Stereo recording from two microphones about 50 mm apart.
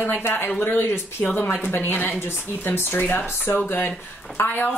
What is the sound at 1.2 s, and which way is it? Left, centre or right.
Speech, left.